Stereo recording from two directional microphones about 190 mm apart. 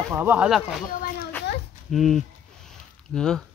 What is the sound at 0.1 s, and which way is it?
Speech, 10° right (ahead or behind).